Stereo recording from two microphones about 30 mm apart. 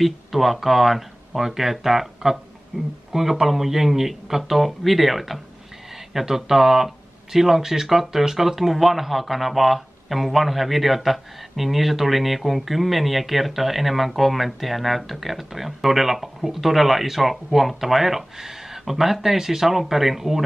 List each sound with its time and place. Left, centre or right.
0.0 s speech: centre
2.7 s speech: right
3.1 s speech: centre